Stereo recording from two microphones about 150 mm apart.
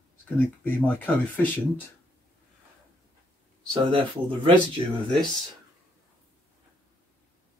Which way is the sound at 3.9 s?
35° right (ahead or behind).